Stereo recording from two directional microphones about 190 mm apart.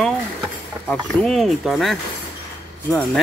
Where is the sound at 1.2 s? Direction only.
Centre (ahead or behind).